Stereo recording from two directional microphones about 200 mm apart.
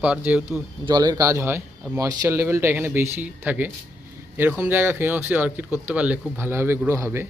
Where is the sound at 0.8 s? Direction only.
20° right (ahead or behind).